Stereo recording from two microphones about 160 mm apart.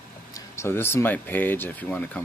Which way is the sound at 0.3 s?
15° left (ahead or behind).